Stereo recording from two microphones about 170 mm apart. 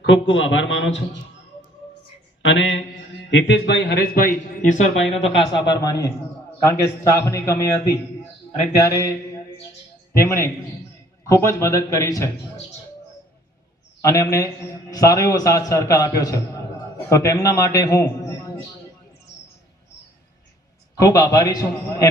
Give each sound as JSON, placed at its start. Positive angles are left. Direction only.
{"t": 0.0, "sound": "a man's voice", "side_deg": 90}
{"t": 2.4, "sound": "mantra", "side_deg": 90}
{"t": 3.2, "sound": "a man's voice", "side_deg": 90}
{"t": 5.1, "sound": "a man's voice", "side_deg": 30}
{"t": 8.8, "sound": "a man's voice", "side_deg": 20}
{"t": 10.2, "sound": "a man's voice", "side_deg": 15}
{"t": 14.0, "sound": "a man's voice", "side_deg": 20}
{"t": 20.9, "sound": "a man's voice", "side_deg": 20}